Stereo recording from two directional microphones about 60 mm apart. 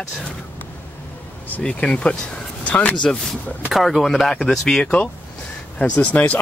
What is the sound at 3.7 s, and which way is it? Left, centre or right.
Speech, centre.